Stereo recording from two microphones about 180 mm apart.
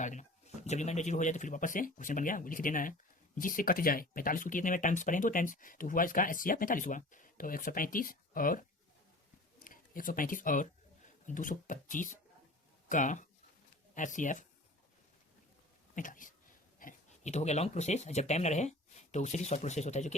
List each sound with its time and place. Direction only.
0.0 s speech: 45° left (ahead or behind)
9.6 s speech: 50° left (ahead or behind)
16.0 s speech: 45° left (ahead or behind)